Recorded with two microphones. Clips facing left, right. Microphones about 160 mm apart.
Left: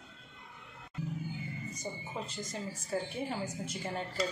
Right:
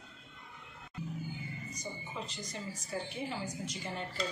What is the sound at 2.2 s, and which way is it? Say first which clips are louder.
A woman's voice: left 3 dB; 45° left (ahead or behind).